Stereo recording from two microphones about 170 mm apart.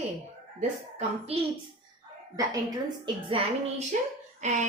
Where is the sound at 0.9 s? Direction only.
35° right (ahead or behind).